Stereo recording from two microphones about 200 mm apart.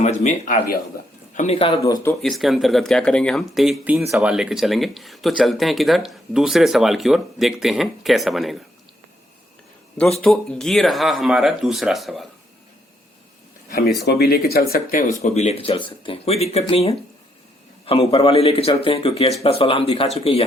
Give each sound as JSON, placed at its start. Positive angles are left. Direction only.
{"t": 0.0, "sound": "speech", "side_deg": 35}
{"t": 1.4, "sound": "speech", "side_deg": 30}
{"t": 1.8, "sound": "speech", "side_deg": 15}
{"t": 2.2, "sound": "speech", "side_deg": 0}
{"t": 10.2, "sound": "speech", "side_deg": 5}
{"t": 14.1, "sound": "speech", "side_deg": 50}
{"t": 15.2, "sound": "speech", "side_deg": 35}
{"t": 18.1, "sound": "speech", "side_deg": 30}